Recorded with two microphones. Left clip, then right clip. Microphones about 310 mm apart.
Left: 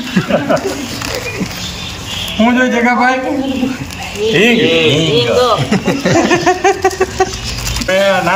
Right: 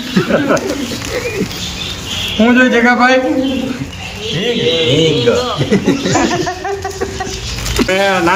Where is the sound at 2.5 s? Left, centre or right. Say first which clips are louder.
Right 3 dB; centre.